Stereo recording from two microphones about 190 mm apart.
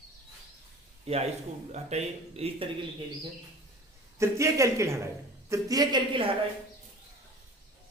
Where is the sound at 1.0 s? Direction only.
35° right (ahead or behind).